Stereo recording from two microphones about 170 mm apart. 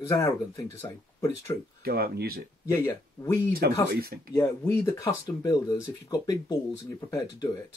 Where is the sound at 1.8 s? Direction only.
65° right (ahead or behind).